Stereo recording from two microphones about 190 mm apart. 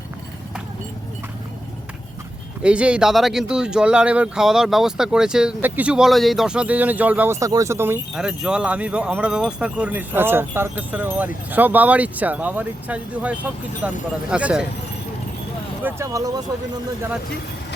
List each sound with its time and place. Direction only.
2.6 s speech: 5° right (ahead or behind)
15.8 s speech: 15° right (ahead or behind)